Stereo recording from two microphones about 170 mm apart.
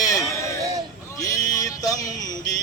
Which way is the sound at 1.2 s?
20° left (ahead or behind).